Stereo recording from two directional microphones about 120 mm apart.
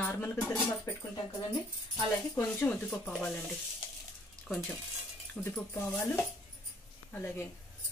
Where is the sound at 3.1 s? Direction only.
5° left (ahead or behind).